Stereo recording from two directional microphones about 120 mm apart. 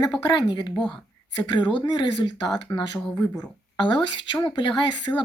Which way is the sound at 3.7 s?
40° left (ahead or behind).